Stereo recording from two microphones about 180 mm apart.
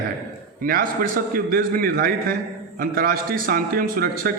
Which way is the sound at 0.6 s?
50° right (ahead or behind).